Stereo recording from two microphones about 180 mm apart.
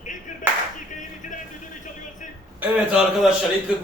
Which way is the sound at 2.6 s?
5° right (ahead or behind).